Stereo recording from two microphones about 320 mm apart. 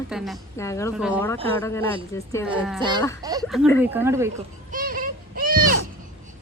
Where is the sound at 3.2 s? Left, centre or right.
Centre.